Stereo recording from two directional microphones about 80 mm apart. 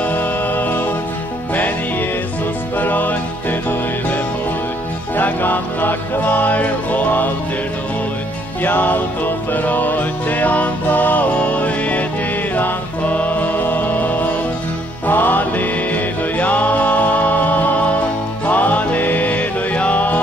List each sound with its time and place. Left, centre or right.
0.0 s music: left
2.8 s music: left
5.1 s music: left
8.6 s music: left